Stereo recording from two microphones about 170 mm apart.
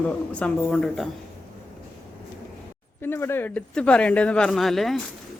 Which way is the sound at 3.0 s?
15° left (ahead or behind).